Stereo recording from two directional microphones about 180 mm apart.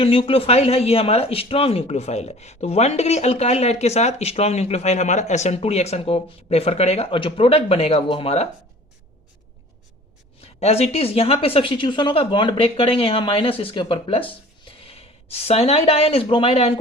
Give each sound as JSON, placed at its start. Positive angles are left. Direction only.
{"t": 0.0, "sound": "speech", "side_deg": 30}
{"t": 10.4, "sound": "speech", "side_deg": 35}